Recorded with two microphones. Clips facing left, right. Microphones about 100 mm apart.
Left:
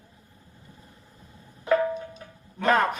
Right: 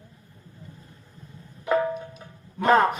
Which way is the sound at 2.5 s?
20° right (ahead or behind).